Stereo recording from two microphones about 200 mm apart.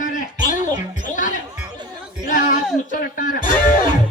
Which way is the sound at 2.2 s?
40° left (ahead or behind).